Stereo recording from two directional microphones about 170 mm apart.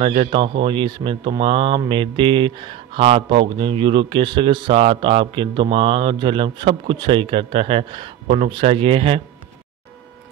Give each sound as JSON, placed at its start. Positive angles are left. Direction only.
{"t": 0.0, "sound": "speech", "side_deg": -35}